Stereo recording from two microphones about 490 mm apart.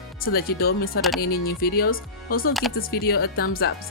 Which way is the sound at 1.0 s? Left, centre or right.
Centre.